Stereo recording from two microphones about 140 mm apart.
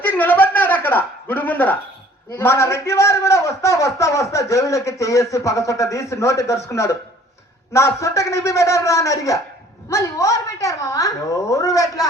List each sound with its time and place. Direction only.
0.0 s a sound: 10° left (ahead or behind)
2.3 s a man's voice: 15° left (ahead or behind)
7.7 s a man's voice: 20° left (ahead or behind)